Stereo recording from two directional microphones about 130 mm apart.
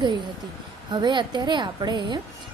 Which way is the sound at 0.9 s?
35° right (ahead or behind).